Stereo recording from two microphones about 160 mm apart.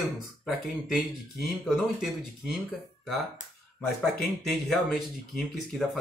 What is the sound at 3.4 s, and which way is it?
Speech, 50° left (ahead or behind).